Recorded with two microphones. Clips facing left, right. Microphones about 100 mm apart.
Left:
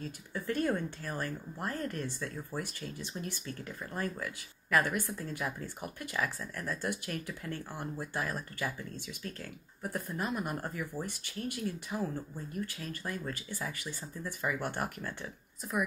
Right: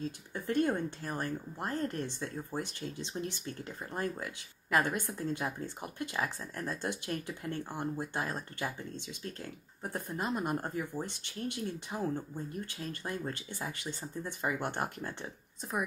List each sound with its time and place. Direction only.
0.3 s a woman's voice: 20° right (ahead or behind)